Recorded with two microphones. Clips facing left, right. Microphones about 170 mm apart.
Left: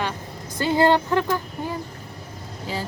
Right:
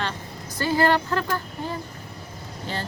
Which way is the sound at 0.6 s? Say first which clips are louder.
Left 3 dB; 20° left (ahead or behind).